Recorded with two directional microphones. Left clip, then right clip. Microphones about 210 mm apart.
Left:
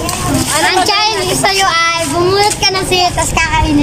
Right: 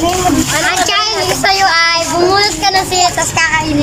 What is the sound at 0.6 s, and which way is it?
A child's voice, 20° left (ahead or behind).